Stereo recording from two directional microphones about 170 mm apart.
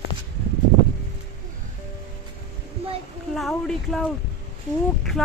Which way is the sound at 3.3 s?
Centre (ahead or behind).